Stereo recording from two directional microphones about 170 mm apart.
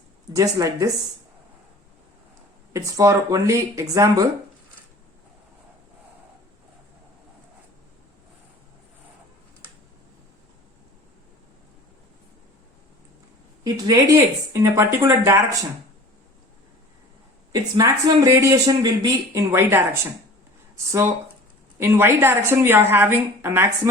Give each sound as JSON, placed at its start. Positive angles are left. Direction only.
{"t": 0.3, "sound": "speech", "side_deg": -20}
{"t": 2.7, "sound": "speech", "side_deg": -20}
{"t": 13.8, "sound": "a woman's voice", "side_deg": -20}
{"t": 17.5, "sound": "a woman's voice", "side_deg": -20}